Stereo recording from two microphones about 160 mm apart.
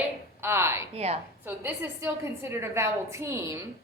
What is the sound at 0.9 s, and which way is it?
Speech, 40° right (ahead or behind).